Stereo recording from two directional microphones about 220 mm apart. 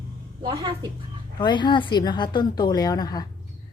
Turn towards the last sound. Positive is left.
turn(degrees=15)  # may be behind; listen again after turning